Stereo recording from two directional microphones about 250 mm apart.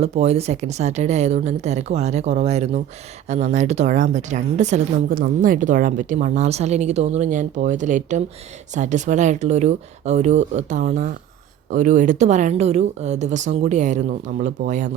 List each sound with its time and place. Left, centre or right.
0.0 s speech: right